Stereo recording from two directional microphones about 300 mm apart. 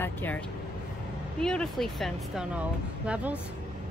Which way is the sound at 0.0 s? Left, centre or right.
Centre.